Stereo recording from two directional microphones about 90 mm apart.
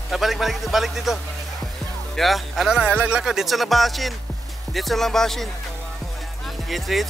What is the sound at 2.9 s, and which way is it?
Speech, 15° right (ahead or behind).